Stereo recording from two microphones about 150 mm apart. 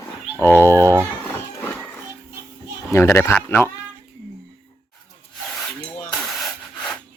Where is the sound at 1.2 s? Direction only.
10° left (ahead or behind).